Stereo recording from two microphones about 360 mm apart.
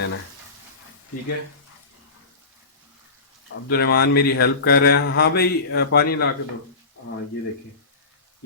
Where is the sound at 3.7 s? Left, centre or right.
Left.